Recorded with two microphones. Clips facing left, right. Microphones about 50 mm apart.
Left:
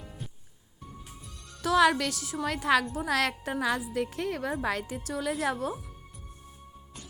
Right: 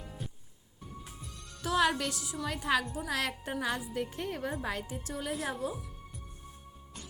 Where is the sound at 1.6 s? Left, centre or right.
Left.